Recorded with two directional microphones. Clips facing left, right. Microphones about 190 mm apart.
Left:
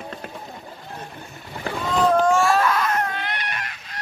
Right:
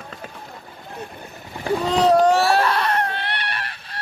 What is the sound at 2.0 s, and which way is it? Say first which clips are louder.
Speech: right 2 dB; 35° right (ahead or behind).